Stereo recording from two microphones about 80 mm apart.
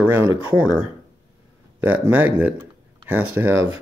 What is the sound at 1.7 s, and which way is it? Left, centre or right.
Speech, right.